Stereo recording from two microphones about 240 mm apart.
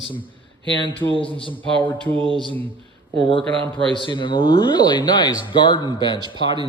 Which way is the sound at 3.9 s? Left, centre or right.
Centre.